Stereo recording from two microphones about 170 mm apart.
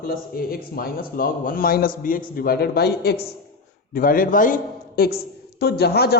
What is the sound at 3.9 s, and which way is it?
Speech, 55° left (ahead or behind).